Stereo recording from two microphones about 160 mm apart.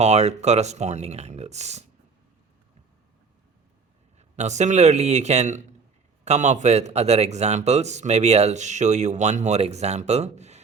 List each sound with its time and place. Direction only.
0.0 s a man's voice: 45° right (ahead or behind)
4.2 s a man's voice: 45° right (ahead or behind)